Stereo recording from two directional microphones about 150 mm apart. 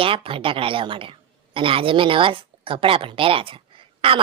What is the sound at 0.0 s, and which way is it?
A woman's voice, 35° right (ahead or behind).